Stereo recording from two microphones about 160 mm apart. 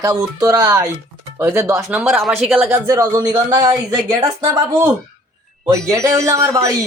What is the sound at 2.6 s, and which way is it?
Speech, 15° right (ahead or behind).